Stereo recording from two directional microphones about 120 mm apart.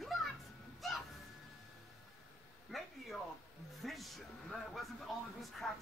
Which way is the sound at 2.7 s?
Centre (ahead or behind).